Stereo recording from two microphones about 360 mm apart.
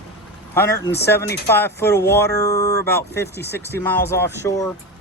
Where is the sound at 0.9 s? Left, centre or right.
Left.